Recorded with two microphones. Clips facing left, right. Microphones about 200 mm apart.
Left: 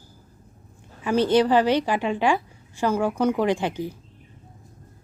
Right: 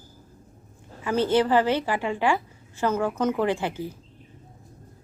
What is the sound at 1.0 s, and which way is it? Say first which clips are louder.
A woman's voice: left 3 dB; 15° left (ahead or behind).